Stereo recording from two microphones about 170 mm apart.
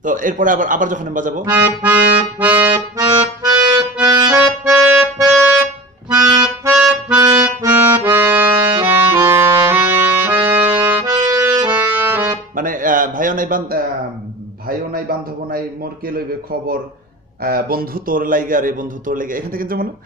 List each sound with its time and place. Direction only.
0.0 s a man's voice: 50° right (ahead or behind)
1.5 s accordion: 20° right (ahead or behind)
6.1 s music: 20° right (ahead or behind)
10.2 s accordion: 15° right (ahead or behind)
12.5 s a sound: 50° right (ahead or behind)
17.4 s a man's voice: 60° right (ahead or behind)